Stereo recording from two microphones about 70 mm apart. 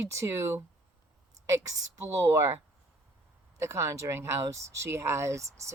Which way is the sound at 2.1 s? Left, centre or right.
Right.